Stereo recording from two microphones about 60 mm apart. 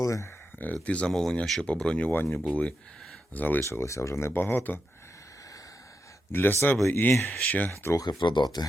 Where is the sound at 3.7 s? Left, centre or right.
Left.